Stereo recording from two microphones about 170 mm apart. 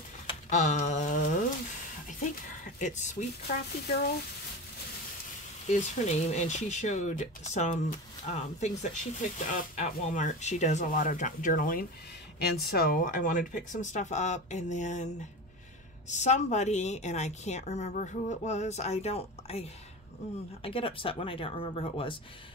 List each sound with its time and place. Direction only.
0.5 s a sound: 45° left (ahead or behind)
2.6 s speech: 45° left (ahead or behind)
5.7 s speech: 45° left (ahead or behind)
12.4 s speech: 70° left (ahead or behind); by 15.0 s 45° left (ahead or behind)
16.1 s speech: 45° left (ahead or behind)
20.6 s speech: 30° left (ahead or behind)